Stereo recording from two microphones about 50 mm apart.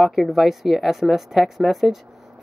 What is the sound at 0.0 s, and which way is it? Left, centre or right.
A woman's voice, centre.